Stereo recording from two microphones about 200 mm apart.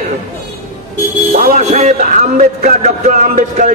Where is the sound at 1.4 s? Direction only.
40° right (ahead or behind).